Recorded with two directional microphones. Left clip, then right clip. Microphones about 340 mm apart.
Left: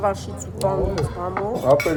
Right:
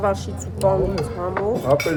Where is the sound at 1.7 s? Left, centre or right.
Left.